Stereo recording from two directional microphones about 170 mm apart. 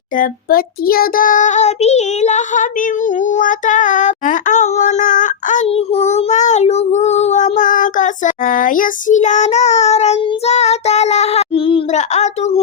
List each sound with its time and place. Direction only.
0.2 s child singing: 60° left (ahead or behind); by 12.6 s 40° left (ahead or behind)